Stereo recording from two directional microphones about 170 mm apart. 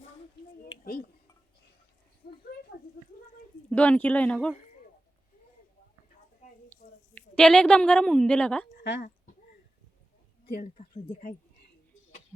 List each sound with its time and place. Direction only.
0.7 s a sound: 60° left (ahead or behind)
2.2 s a sound: 60° left (ahead or behind)
3.7 s speech: 10° left (ahead or behind)
6.7 s a woman's voice: 5° left (ahead or behind)
8.8 s speech: 90° left
10.4 s speech: 65° left (ahead or behind)
10.8 s speech: 50° left (ahead or behind)